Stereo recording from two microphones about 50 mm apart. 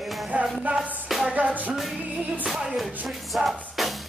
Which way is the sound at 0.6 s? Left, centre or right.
Right.